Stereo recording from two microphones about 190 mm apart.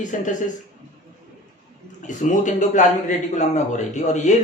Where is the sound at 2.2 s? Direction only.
40° left (ahead or behind).